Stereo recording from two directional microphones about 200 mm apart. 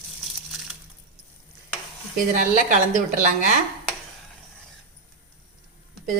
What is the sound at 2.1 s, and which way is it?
Speech, 40° right (ahead or behind).